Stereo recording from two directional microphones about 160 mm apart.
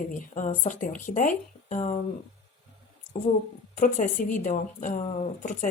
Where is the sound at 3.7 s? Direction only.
55° left (ahead or behind).